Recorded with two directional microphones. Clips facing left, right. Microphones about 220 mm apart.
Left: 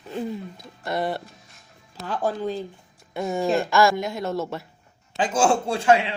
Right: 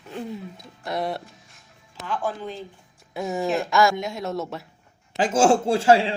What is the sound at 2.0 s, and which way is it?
Speech, 40° left (ahead or behind).